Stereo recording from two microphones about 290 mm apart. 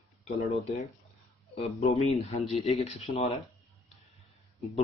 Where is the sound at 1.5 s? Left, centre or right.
Left.